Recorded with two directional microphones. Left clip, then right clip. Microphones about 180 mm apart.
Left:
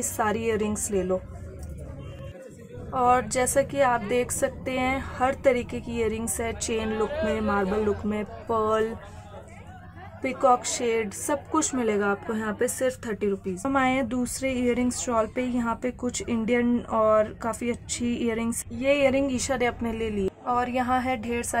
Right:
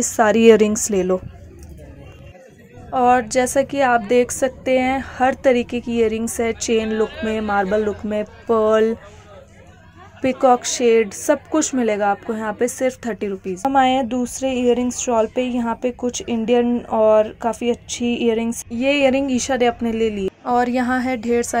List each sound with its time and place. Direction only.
0.0 s a woman's voice: 30° right (ahead or behind)
2.9 s a woman's voice: 20° right (ahead or behind)
10.2 s a woman's voice: 25° right (ahead or behind)